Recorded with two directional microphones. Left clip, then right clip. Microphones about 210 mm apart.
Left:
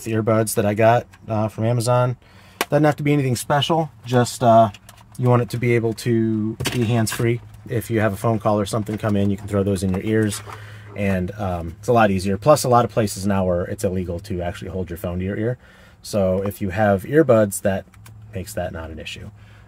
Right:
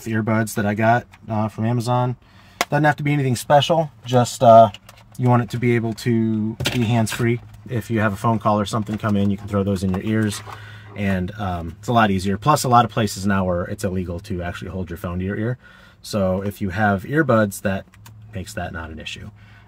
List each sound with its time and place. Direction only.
0.0 s speech: 20° left (ahead or behind)
1.7 s speech: 40° left (ahead or behind)
2.7 s speech: 5° left (ahead or behind)
3.5 s speech: 10° right (ahead or behind)
5.2 s speech: 10° left (ahead or behind)